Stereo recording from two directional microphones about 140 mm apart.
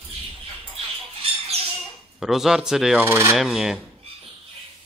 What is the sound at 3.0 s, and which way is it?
Rub, 20° right (ahead or behind).